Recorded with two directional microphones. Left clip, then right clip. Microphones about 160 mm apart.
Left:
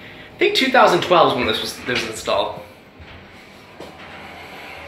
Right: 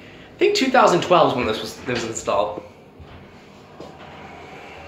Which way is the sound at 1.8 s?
20° right (ahead or behind).